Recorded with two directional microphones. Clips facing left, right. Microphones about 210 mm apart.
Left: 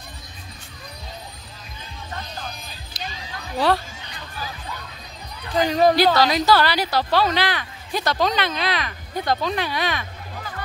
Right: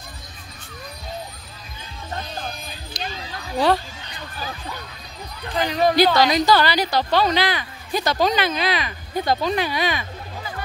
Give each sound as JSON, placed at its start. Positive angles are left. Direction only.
{"t": 2.9, "sound": "a sound", "side_deg": 5}
{"t": 3.5, "sound": "speech", "side_deg": 0}
{"t": 5.7, "sound": "speech", "side_deg": 40}
{"t": 6.1, "sound": "speech", "side_deg": 5}